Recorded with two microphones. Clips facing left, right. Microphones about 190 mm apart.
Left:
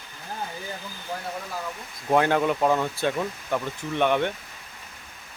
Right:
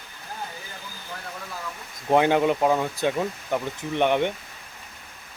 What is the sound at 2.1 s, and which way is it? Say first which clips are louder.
Speech: right 2 dB; 15° right (ahead or behind).